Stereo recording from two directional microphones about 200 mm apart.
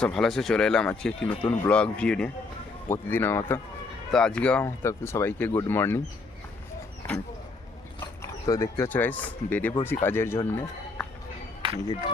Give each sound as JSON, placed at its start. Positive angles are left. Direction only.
{"t": 0.0, "sound": "speech", "side_deg": 0}
{"t": 7.9, "sound": "speech", "side_deg": 15}
{"t": 11.6, "sound": "a sound", "side_deg": -25}